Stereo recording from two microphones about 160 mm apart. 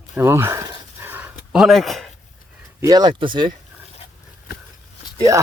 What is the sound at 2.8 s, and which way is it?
Speech, 25° right (ahead or behind).